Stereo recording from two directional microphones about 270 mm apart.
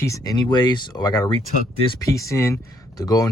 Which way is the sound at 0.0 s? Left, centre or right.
Centre.